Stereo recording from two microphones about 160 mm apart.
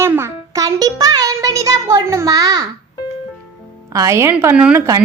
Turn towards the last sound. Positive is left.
turn(degrees=-10)  # may be behind; listen again after turning